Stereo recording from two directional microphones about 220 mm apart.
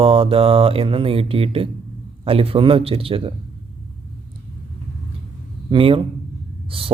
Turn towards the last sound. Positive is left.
turn(degrees=-25)  # may be behind; listen again after turning